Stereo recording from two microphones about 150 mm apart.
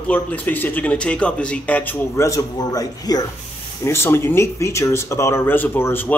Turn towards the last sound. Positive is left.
turn(degrees=15)  # may be behind; listen again after turning